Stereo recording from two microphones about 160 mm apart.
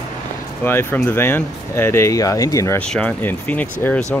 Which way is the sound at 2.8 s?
5° left (ahead or behind).